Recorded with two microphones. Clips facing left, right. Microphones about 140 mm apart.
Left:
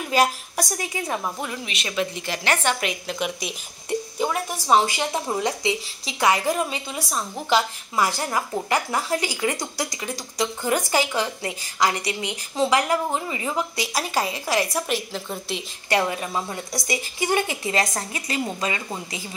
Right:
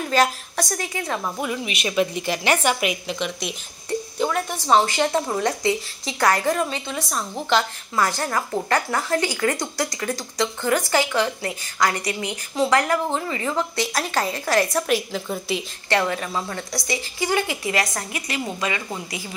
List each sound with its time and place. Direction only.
0.1 s a woman's voice: 10° left (ahead or behind)
1.4 s a woman's voice: 10° right (ahead or behind)
3.2 s a woman's voice: 5° left (ahead or behind)
15.9 s a woman's voice: 15° left (ahead or behind)